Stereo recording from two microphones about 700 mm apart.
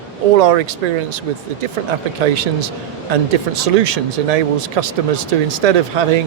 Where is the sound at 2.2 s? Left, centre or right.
Right.